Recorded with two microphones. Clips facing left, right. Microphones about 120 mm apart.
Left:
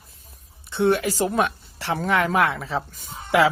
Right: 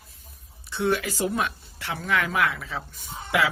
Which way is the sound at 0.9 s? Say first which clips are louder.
Left 4 dB; 35° left (ahead or behind).